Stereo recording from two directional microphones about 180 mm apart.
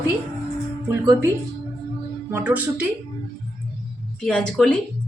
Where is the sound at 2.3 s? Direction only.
10° right (ahead or behind).